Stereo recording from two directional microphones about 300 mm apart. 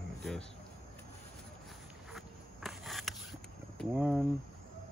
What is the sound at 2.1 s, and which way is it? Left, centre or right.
Insect, centre.